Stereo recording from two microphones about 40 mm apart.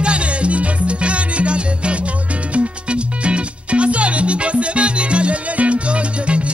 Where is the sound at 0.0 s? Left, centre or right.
Right.